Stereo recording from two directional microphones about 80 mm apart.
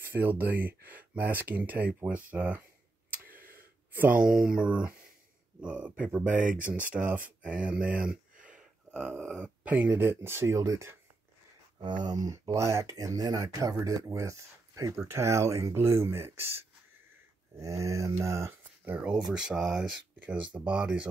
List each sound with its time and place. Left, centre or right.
0.0 s speech: right
3.9 s speech: right
4.2 s speech: centre; by 11.0 s right
11.8 s speech: right
17.6 s speech: right
18.9 s speech: centre